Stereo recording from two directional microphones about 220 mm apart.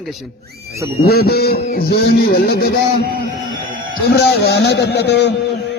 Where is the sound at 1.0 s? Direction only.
45° left (ahead or behind).